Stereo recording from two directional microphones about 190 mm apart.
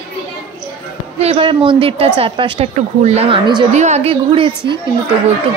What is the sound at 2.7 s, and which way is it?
Speech, 35° right (ahead or behind).